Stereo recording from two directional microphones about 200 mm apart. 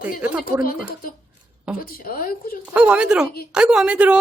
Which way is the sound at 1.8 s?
45° left (ahead or behind).